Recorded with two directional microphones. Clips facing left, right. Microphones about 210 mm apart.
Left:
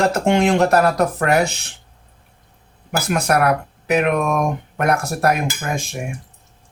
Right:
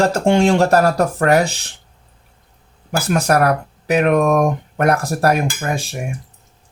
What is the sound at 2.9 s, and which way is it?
Speech, 30° right (ahead or behind).